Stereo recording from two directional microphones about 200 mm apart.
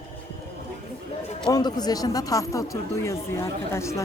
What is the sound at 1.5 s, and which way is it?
Speech, 20° left (ahead or behind).